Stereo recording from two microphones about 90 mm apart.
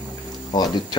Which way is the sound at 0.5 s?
50° left (ahead or behind).